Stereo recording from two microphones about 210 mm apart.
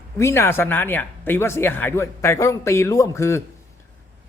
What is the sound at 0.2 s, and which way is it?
Speech, 10° left (ahead or behind).